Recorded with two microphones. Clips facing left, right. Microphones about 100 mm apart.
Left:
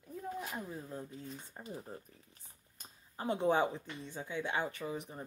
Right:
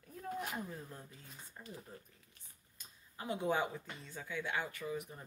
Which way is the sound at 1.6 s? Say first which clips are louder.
Left 4 dB; 30° left (ahead or behind).